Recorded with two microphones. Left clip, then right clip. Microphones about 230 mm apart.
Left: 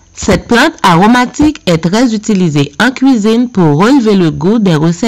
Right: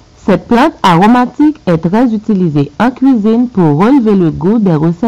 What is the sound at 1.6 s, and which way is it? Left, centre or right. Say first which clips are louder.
Speech: left 1 dB; left.